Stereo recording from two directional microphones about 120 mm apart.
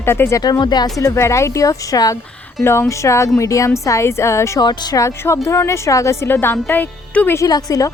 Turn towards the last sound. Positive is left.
turn(degrees=30)  # may be behind; listen again after turning